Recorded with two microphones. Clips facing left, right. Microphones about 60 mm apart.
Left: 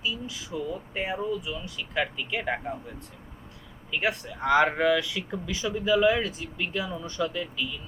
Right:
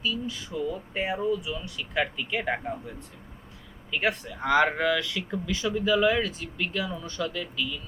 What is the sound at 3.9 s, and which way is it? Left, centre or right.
Speech, centre.